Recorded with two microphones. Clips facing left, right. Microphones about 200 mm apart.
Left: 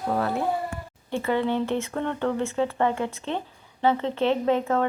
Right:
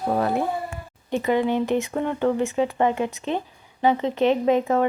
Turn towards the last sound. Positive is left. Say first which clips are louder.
# right 3 dB
turn(degrees=-15)  # may be behind; listen again after turning